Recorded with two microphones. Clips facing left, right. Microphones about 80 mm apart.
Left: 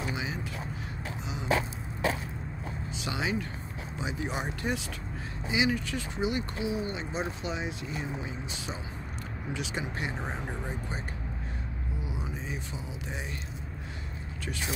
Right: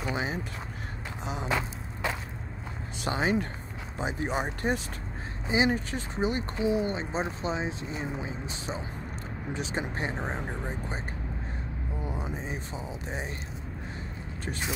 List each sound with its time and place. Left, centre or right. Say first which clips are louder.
0.1 s a sound: right 3 dB; right
3.0 s speech: right 5 dB; right
10.4 s speech: right 2 dB; centre
12.0 s music: right 4 dB; right